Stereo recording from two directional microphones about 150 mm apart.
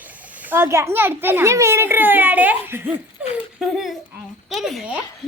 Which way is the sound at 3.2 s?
10° right (ahead or behind).